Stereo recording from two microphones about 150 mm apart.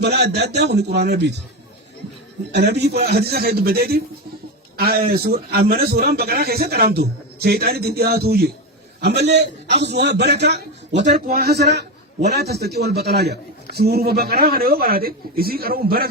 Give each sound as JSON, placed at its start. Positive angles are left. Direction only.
{"t": 0.0, "sound": "a man's voice", "side_deg": -90}
{"t": 2.5, "sound": "a man's voice", "side_deg": -90}